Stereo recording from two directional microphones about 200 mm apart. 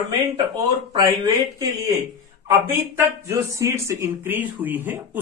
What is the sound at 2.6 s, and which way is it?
Speech, 10° right (ahead or behind).